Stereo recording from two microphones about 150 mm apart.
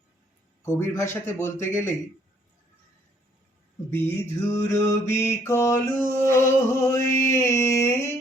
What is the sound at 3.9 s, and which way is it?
Mantra, 15° left (ahead or behind).